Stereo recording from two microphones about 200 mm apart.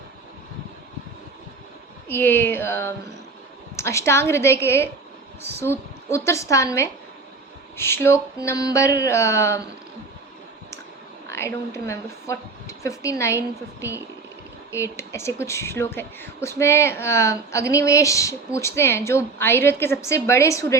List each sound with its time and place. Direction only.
2.0 s a woman's voice: 10° left (ahead or behind)
11.3 s a woman's voice: 15° left (ahead or behind)
14.7 s a woman's voice: 15° left (ahead or behind)